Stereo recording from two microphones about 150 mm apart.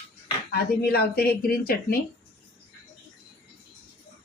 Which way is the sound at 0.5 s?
90° left.